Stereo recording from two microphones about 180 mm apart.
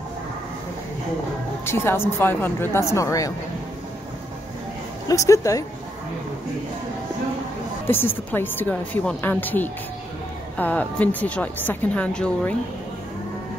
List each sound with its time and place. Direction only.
1.7 s a woman's voice: 15° left (ahead or behind)
5.0 s a woman's voice: 15° left (ahead or behind)
7.9 s a woman's voice: 10° left (ahead or behind)